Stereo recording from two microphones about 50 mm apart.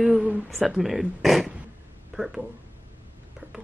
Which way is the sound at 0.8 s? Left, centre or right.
Centre.